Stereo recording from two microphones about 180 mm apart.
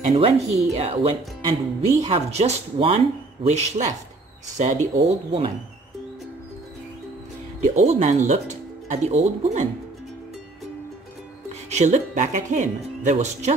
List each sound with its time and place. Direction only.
0.1 s speech: 35° right (ahead or behind)
7.6 s speech: 40° right (ahead or behind)
11.7 s speech: 40° right (ahead or behind)